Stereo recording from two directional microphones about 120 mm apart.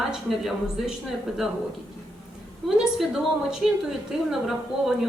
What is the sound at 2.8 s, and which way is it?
A woman's voice, 5° right (ahead or behind).